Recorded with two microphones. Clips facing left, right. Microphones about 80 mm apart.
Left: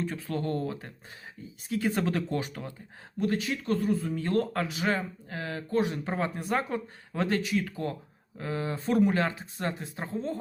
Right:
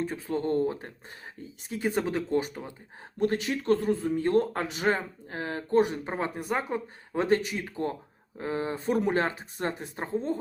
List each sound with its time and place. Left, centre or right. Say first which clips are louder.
0.3 s speech: right 6 dB; right
3.2 s speech: right 2 dB; right